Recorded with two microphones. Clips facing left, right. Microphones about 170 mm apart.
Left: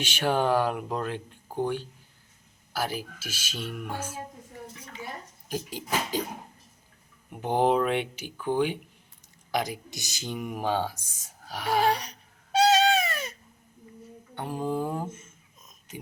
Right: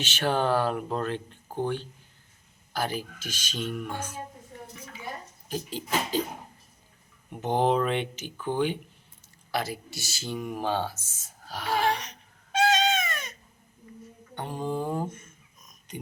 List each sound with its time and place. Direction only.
0.0 s speech: 10° left (ahead or behind)
5.5 s speech: 10° left (ahead or behind)
7.3 s speech: 10° left (ahead or behind)
11.9 s baby cry: 35° left (ahead or behind)
14.3 s a sound: 5° left (ahead or behind)
15.1 s a sound: 25° left (ahead or behind)